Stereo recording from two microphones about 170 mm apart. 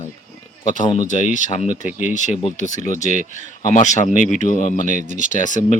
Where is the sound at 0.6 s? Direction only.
45° left (ahead or behind).